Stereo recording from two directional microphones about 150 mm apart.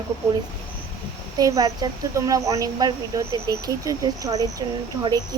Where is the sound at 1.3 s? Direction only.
25° right (ahead or behind).